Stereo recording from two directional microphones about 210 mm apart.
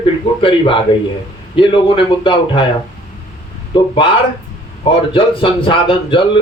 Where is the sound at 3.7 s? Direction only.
25° left (ahead or behind).